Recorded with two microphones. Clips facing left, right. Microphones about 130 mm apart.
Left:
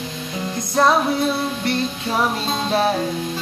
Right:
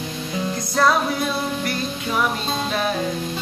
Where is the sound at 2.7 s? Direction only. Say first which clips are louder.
Left 6 dB; 35° left (ahead or behind).